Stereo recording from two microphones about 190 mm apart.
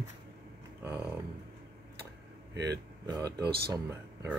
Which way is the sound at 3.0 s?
20° right (ahead or behind).